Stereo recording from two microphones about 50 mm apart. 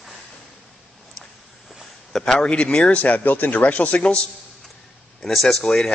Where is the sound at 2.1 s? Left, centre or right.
Centre.